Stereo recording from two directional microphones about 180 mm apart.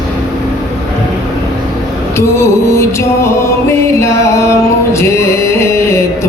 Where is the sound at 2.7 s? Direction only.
15° left (ahead or behind).